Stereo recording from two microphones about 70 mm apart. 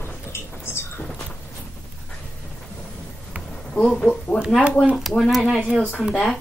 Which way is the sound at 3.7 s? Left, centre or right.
Centre.